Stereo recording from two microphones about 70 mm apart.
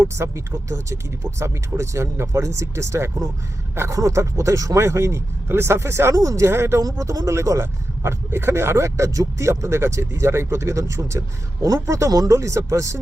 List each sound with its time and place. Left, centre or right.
0.0 s speech: right
7.0 s speech: right